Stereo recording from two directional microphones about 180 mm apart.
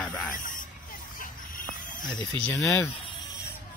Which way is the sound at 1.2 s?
50° left (ahead or behind).